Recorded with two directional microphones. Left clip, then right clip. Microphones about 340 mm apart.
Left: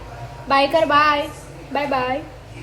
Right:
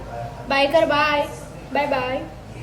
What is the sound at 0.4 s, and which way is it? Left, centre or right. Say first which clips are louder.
A woman's voice: left 1 dB; centre.